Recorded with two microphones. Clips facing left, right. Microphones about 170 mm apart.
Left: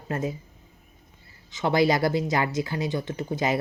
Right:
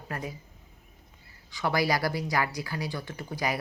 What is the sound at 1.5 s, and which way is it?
Speech, 20° left (ahead or behind).